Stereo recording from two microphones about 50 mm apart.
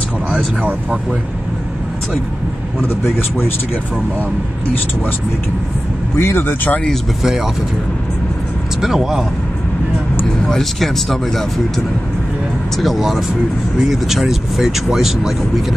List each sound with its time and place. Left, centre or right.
3.2 s speech: left
6.1 s speech: left
8.8 s speech: centre
10.4 s speech: centre
12.7 s speech: centre